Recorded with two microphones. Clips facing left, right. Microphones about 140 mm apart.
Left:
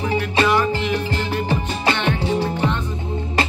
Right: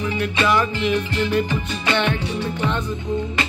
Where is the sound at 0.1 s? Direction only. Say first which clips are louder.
Left 2 dB; 35° left (ahead or behind).